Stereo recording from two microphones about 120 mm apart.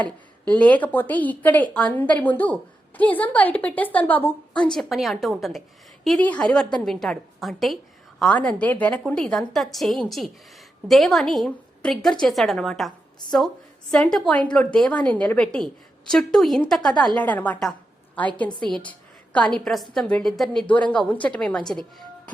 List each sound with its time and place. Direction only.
0.0 s a woman's voice: 10° left (ahead or behind)
4.5 s a woman's voice: 5° left (ahead or behind)
6.1 s a woman's voice: 10° left (ahead or behind)
13.9 s a woman's voice: 5° left (ahead or behind)
18.9 s a woman's voice: 10° left (ahead or behind)